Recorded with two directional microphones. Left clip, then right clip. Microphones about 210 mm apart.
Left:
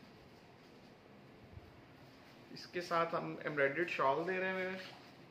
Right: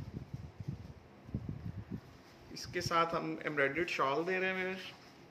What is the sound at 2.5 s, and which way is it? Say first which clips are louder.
Speech: right 3 dB; 45° right (ahead or behind).